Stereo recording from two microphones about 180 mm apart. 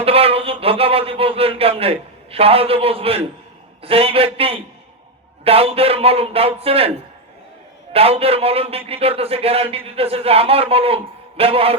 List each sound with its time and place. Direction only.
0.0 s a man's voice: 35° right (ahead or behind)
7.9 s speech: 35° right (ahead or behind)